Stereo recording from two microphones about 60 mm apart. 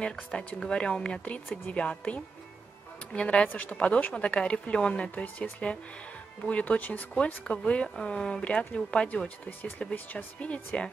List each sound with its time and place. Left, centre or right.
0.1 s speech: centre
3.4 s speech: left
9.6 s speech: left